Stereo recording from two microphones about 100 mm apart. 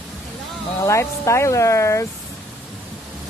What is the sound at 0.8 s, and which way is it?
Speech, 30° left (ahead or behind).